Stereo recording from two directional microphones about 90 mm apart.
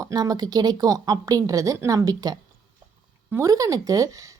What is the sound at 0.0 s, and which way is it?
A woman's voice, 45° right (ahead or behind).